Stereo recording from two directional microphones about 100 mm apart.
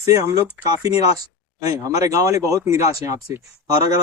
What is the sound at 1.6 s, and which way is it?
Speech, 35° right (ahead or behind).